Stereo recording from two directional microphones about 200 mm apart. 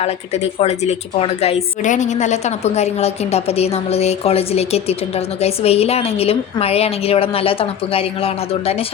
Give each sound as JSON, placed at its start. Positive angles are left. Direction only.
{"t": 0.6, "sound": "a woman's voice", "side_deg": 30}